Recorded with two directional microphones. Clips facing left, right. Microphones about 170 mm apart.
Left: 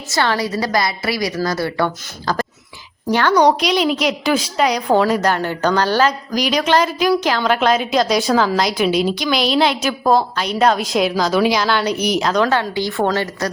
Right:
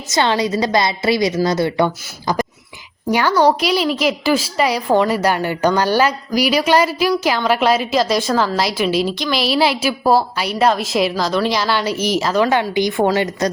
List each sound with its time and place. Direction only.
0.1 s a woman's voice: 20° right (ahead or behind); by 12.5 s 5° right (ahead or behind)
12.5 s a woman's voice: 15° right (ahead or behind)